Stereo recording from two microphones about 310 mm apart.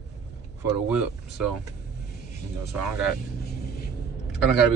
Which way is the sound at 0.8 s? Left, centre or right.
Centre.